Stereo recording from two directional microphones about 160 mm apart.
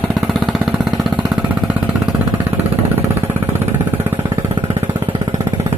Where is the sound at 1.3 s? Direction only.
10° right (ahead or behind).